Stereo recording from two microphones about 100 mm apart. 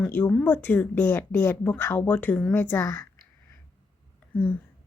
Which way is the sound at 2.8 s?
35° left (ahead or behind).